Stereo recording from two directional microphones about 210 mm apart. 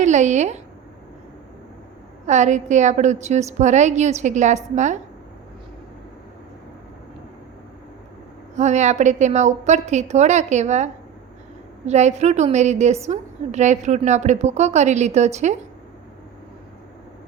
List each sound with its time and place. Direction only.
0.0 s a woman's voice: 35° right (ahead or behind)
2.2 s a woman's voice: 35° right (ahead or behind)
8.5 s a woman's voice: 35° right (ahead or behind)